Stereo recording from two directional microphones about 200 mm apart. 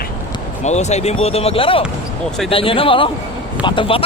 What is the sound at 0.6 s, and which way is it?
Speech, 35° left (ahead or behind).